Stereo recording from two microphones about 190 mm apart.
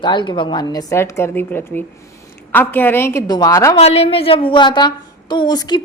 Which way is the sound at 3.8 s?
35° left (ahead or behind).